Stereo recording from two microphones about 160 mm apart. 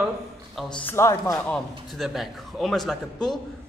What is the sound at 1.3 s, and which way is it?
A man's voice, centre (ahead or behind).